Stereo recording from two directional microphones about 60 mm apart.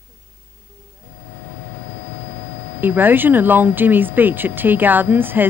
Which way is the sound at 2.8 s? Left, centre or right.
Right.